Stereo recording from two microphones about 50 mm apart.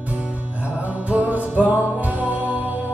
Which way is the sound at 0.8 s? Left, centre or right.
Right.